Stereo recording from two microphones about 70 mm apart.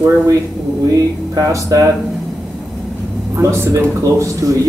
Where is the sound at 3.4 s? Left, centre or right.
Right.